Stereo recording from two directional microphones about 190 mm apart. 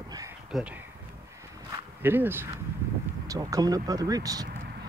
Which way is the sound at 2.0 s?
10° right (ahead or behind).